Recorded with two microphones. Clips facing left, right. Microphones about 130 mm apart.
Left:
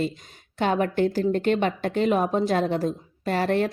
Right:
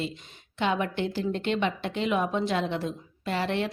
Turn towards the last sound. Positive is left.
turn(degrees=45)  # may be behind; listen again after turning